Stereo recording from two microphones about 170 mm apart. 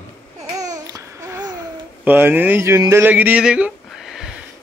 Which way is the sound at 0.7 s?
20° right (ahead or behind).